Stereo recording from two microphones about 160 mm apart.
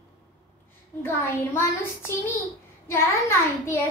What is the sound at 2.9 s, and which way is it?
Speech, 15° left (ahead or behind).